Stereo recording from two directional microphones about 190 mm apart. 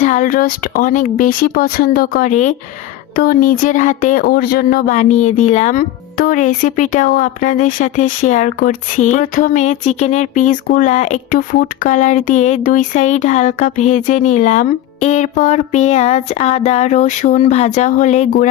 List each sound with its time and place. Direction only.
0.0 s speech: 40° left (ahead or behind)